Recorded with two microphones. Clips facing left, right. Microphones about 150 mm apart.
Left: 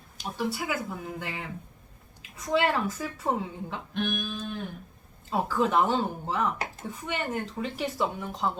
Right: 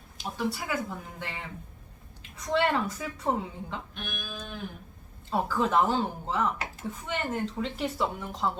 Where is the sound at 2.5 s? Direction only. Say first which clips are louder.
Left 1 dB; centre (ahead or behind).